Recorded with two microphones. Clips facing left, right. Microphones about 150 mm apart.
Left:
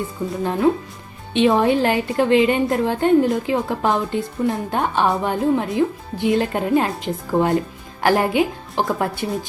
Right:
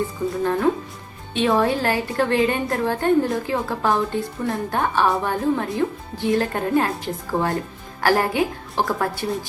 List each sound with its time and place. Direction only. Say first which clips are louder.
0.2 s a woman's voice: left 2 dB; 10° left (ahead or behind)